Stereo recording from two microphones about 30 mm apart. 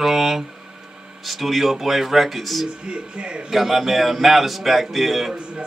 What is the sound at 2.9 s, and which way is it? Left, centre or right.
Speech, right.